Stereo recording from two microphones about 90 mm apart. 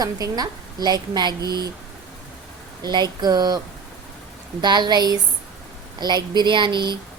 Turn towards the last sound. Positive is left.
turn(degrees=-60)  # may be behind; listen again after turning